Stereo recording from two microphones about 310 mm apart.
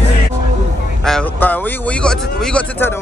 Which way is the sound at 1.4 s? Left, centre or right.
Centre.